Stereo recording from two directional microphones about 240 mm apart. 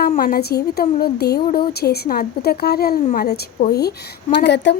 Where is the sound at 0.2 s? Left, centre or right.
Left.